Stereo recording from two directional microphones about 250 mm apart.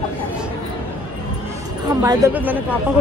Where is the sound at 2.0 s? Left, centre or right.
Centre.